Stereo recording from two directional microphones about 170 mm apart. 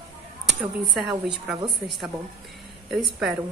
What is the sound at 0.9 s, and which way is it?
Speech, 5° right (ahead or behind).